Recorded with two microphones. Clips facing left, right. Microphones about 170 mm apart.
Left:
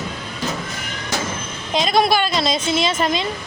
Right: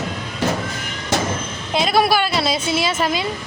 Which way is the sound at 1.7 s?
5° right (ahead or behind).